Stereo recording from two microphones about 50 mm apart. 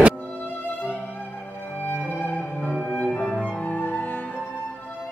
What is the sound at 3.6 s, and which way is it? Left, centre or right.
Music, left.